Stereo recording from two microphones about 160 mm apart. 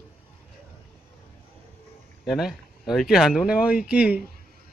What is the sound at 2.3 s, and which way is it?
Speech, centre (ahead or behind).